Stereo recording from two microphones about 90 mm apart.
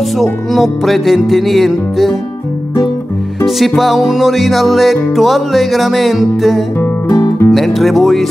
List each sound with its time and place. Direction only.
0.2 s music: centre (ahead or behind)
3.4 s music: centre (ahead or behind)
7.2 s music: 30° left (ahead or behind)
7.5 s music: centre (ahead or behind)